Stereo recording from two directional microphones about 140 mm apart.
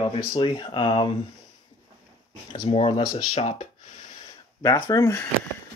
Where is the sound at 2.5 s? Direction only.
45° left (ahead or behind).